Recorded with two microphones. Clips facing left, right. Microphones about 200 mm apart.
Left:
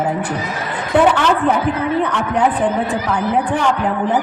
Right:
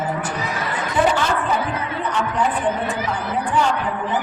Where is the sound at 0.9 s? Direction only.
65° left (ahead or behind).